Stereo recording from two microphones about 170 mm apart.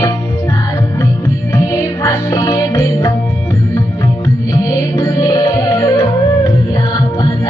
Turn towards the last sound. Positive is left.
turn(degrees=20)  # may be behind; listen again after turning